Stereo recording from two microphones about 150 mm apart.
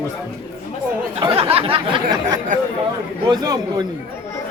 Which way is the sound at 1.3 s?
40° right (ahead or behind).